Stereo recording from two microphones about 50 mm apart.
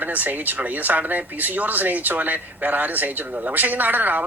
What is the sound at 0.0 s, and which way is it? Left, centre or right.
Speech, right.